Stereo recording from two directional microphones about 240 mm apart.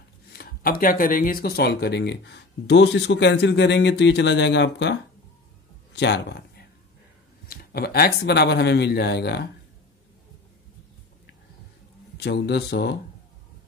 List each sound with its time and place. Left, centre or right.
0.3 s speech: left
5.9 s speech: left
12.2 s speech: left